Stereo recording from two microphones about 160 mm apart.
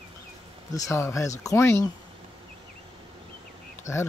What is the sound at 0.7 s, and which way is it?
Speech, 15° left (ahead or behind).